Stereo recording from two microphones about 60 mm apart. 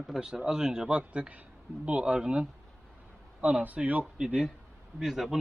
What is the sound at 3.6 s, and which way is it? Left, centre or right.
Speech, right.